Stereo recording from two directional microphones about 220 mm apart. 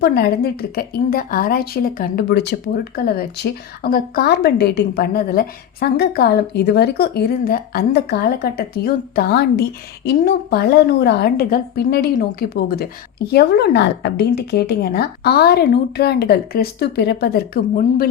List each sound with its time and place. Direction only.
0.0 s a woman's voice: 45° left (ahead or behind)